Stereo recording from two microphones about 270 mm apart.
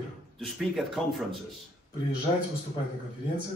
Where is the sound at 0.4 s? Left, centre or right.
Centre.